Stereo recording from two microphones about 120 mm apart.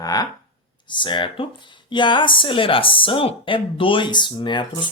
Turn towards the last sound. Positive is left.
turn(degrees=40)  # may be behind; listen again after turning